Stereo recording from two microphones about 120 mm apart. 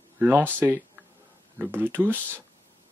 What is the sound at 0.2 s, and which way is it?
Speech, 15° right (ahead or behind).